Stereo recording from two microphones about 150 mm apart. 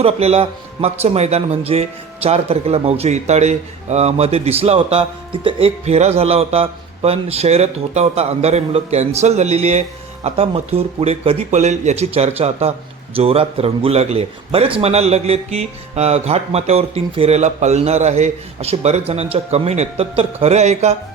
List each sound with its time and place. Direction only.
0.0 s a man's voice: 45° right (ahead or behind)